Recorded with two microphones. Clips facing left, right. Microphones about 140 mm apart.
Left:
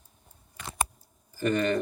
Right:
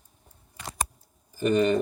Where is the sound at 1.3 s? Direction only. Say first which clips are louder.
Right 4 dB; 15° right (ahead or behind).